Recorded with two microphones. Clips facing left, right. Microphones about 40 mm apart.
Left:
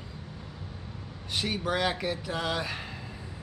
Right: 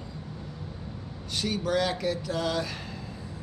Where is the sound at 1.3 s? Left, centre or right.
Left.